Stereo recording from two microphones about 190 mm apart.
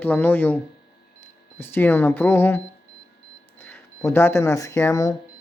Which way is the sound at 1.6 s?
10° left (ahead or behind).